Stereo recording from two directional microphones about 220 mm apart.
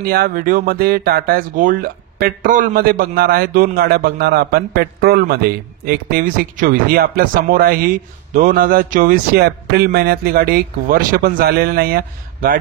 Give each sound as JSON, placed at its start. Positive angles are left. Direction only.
{"t": 0.0, "sound": "speech", "side_deg": -45}